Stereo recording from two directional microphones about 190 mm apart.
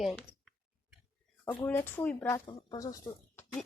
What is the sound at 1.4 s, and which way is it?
Speech, 10° left (ahead or behind).